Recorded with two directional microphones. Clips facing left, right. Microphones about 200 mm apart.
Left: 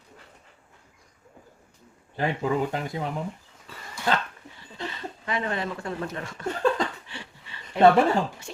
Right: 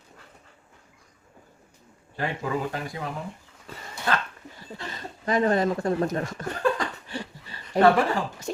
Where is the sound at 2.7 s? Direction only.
25° left (ahead or behind).